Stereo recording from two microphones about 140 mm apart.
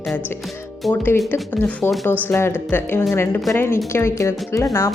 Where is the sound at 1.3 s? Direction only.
15° left (ahead or behind).